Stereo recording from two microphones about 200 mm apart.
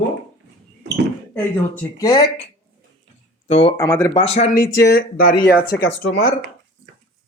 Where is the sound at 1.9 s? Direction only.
15° left (ahead or behind).